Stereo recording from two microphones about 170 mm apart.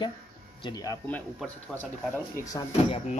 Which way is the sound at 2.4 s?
20° left (ahead or behind).